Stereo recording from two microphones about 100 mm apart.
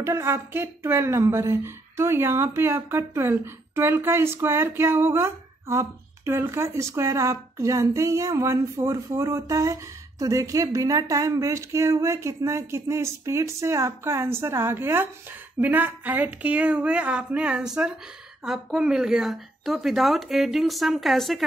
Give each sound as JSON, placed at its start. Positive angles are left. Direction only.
{"t": 0.0, "sound": "a woman's voice", "side_deg": -25}